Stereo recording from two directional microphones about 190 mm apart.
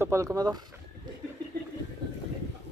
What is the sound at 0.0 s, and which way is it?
Speech, 15° right (ahead or behind).